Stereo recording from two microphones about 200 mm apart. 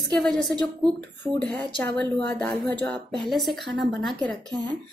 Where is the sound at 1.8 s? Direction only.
5° left (ahead or behind).